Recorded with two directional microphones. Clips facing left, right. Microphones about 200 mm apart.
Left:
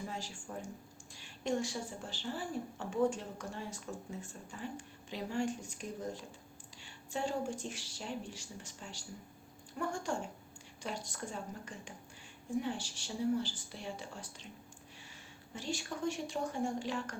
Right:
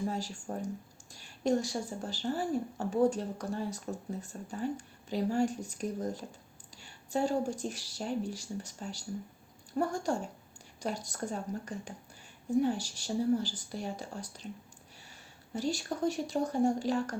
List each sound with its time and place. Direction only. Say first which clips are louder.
0.1 s a woman's voice: right 7 dB; 40° right (ahead or behind)
15.5 s a woman's voice: right 7 dB; 40° right (ahead or behind)